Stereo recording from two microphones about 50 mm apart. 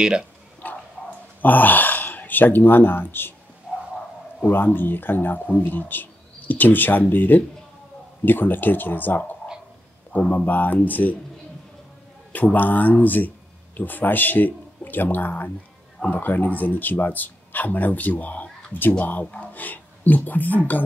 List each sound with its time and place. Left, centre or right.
0.0 s speech: centre
0.6 s a sound: left
1.4 s speech: left
4.5 s speech: left
12.3 s speech: left